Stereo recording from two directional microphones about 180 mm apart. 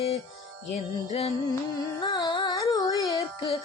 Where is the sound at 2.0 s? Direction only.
20° left (ahead or behind).